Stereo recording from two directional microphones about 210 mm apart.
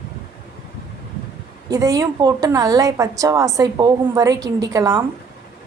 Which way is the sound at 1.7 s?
15° right (ahead or behind).